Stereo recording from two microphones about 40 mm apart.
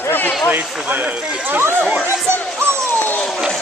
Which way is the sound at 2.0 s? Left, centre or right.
Right.